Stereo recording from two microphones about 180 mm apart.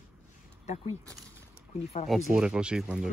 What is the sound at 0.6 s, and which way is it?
Speech, 40° left (ahead or behind).